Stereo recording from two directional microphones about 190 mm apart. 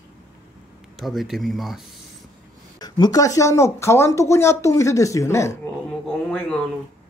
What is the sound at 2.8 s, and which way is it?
Speech, 20° left (ahead or behind).